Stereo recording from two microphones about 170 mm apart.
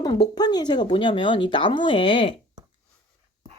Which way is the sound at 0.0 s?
25° left (ahead or behind).